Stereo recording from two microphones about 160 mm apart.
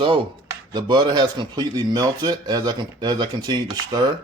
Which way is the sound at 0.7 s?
25° right (ahead or behind).